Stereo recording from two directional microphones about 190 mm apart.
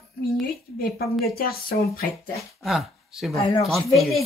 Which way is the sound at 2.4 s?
Centre (ahead or behind).